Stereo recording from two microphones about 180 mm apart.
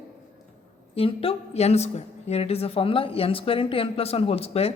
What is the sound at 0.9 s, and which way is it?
A woman's voice, 30° left (ahead or behind).